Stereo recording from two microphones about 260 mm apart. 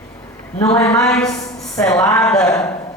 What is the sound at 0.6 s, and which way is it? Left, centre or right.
Speech, centre.